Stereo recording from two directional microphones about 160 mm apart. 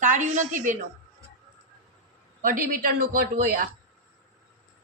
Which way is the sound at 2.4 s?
60° right (ahead or behind).